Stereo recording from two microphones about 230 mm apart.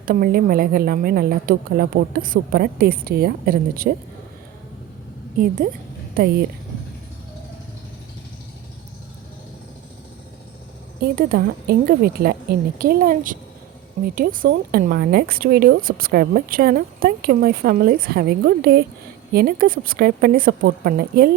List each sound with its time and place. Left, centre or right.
0.0 s speech: right
11.0 s speech: right